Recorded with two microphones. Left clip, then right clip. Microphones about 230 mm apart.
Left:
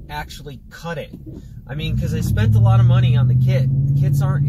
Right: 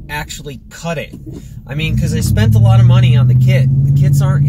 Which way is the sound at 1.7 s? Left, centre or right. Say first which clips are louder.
Right 7 dB; right.